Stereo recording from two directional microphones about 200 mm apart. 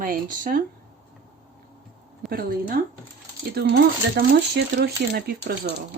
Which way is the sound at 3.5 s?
50° right (ahead or behind).